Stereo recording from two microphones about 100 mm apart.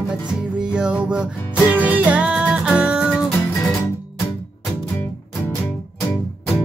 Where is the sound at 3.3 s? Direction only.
25° left (ahead or behind).